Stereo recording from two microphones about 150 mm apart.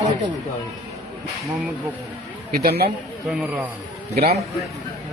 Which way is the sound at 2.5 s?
90° right.